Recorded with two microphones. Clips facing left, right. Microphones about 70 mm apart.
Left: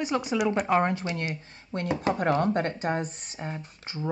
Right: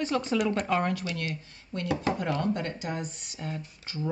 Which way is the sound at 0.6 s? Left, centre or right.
Left.